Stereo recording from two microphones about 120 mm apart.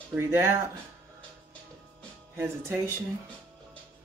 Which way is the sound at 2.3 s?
20° right (ahead or behind).